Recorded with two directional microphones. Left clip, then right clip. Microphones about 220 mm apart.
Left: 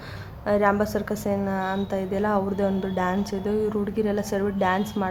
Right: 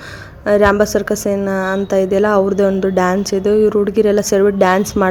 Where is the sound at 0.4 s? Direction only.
25° right (ahead or behind).